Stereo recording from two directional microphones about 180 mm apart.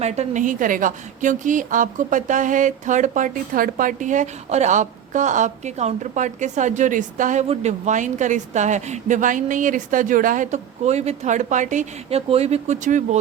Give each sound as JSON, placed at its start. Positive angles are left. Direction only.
{"t": 0.0, "sound": "a woman's voice", "side_deg": -35}